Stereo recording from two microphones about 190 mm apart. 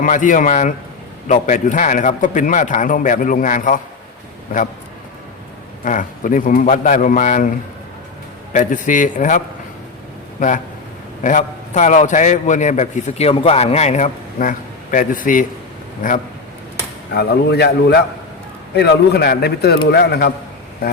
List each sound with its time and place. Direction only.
0.0 s a man's voice: 45° left (ahead or behind)
5.8 s a man's voice: 45° left (ahead or behind)
8.5 s a man's voice: 40° left (ahead or behind)
11.2 s a man's voice: 40° left (ahead or behind)
17.2 s speech: 60° left (ahead or behind)